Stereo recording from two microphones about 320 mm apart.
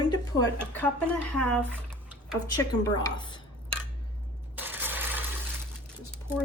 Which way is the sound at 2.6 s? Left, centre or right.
Centre.